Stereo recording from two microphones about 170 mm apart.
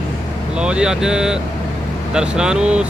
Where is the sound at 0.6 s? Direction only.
5° right (ahead or behind).